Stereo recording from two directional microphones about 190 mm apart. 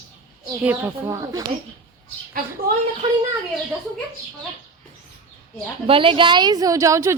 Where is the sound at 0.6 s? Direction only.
10° right (ahead or behind).